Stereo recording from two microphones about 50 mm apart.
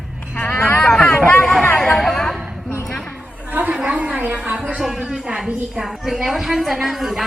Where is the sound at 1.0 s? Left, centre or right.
Left.